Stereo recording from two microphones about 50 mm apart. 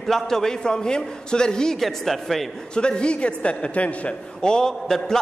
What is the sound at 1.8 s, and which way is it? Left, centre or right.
Speech, centre.